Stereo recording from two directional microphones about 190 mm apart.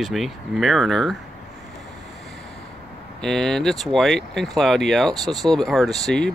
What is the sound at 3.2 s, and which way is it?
Speech, 5° left (ahead or behind).